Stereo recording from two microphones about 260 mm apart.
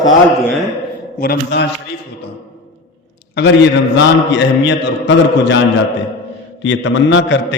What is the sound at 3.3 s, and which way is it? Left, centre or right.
A man's voice, left.